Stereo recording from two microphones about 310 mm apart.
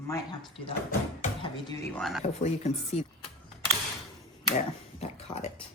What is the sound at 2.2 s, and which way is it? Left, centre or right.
Speech, left.